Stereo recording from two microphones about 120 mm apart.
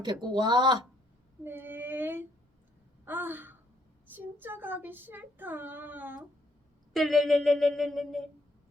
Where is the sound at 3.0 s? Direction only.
15° right (ahead or behind).